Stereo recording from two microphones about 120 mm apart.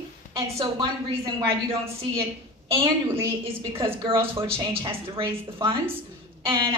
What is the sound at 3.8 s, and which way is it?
A woman's voice, 45° right (ahead or behind).